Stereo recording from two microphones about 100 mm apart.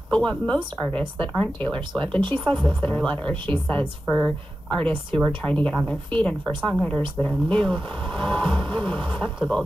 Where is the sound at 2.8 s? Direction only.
15° left (ahead or behind).